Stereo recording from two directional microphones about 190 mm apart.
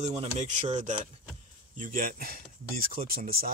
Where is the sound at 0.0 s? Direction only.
35° right (ahead or behind).